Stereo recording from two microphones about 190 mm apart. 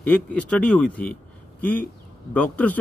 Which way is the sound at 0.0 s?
5° left (ahead or behind).